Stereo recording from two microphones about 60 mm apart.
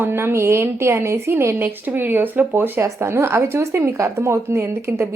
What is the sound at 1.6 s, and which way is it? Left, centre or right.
Speech, right.